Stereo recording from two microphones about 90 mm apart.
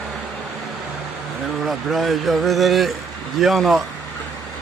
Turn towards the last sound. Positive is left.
turn(degrees=0)  # may be behind; listen again after turning